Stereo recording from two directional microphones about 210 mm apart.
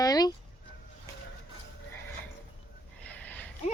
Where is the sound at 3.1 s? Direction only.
10° left (ahead or behind).